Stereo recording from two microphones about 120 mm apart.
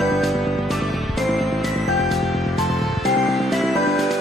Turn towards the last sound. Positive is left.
turn(degrees=0)  # may be behind; listen again after turning